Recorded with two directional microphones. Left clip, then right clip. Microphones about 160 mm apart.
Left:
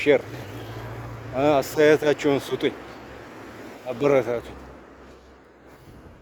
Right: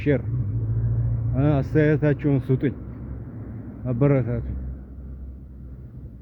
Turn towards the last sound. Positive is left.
turn(degrees=25)  # may be behind; listen again after turning